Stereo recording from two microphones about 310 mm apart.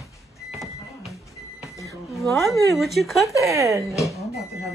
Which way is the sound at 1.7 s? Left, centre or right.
Centre.